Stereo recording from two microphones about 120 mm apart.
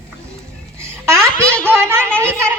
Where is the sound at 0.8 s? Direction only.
25° right (ahead or behind).